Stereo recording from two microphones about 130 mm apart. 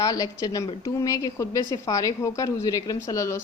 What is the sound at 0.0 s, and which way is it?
A woman's voice, 25° left (ahead or behind).